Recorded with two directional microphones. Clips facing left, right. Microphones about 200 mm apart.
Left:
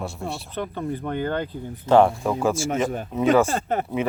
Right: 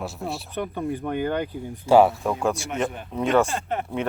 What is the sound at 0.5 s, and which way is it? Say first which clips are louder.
Speech: right 1 dB; 15° right (ahead or behind).